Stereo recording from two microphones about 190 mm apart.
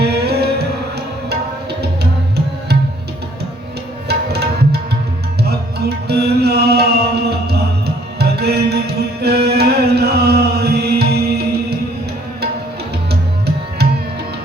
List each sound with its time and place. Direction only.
0.0 s music: 60° right (ahead or behind)
4.1 s music: 60° right (ahead or behind)